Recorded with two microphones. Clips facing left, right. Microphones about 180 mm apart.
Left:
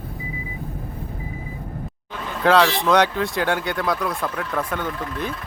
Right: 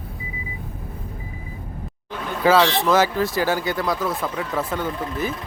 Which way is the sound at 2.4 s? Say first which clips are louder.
Even; 5° right (ahead or behind).